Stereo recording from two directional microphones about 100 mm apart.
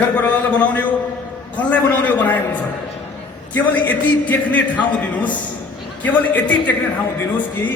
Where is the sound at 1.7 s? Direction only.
15° left (ahead or behind).